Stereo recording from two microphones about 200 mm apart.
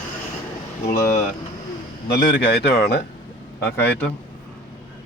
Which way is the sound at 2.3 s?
55° left (ahead or behind).